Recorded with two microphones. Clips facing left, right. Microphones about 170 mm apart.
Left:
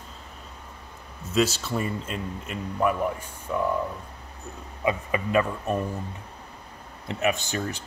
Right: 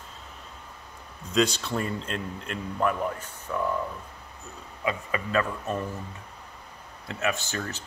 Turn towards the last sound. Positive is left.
turn(degrees=15)  # may be behind; listen again after turning